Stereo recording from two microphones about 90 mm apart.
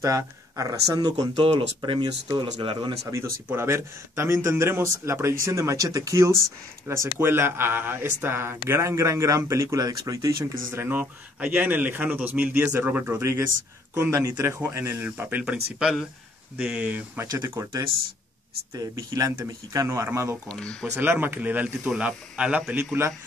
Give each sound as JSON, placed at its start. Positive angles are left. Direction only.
{"t": 0.0, "sound": "speech", "side_deg": -40}
{"t": 1.4, "sound": "speech", "side_deg": -65}
{"t": 2.6, "sound": "speech", "side_deg": -75}
{"t": 3.4, "sound": "speech", "side_deg": -30}
{"t": 10.9, "sound": "speech", "side_deg": -20}
{"t": 15.0, "sound": "speech", "side_deg": -20}
{"t": 17.3, "sound": "speech", "side_deg": -30}
{"t": 18.8, "sound": "speech", "side_deg": -40}
{"t": 20.4, "sound": "speech", "side_deg": 10}
{"t": 20.8, "sound": "speech", "side_deg": -25}